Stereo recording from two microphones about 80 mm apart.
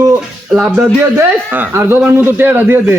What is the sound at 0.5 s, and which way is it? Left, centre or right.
Speech, centre.